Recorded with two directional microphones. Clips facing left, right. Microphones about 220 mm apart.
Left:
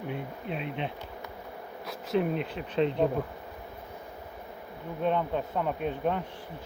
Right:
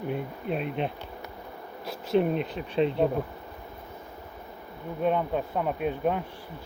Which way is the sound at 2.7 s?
10° right (ahead or behind).